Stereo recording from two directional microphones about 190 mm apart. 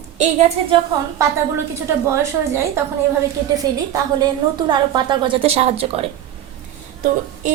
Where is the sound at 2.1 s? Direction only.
15° right (ahead or behind); by 6.0 s 30° right (ahead or behind).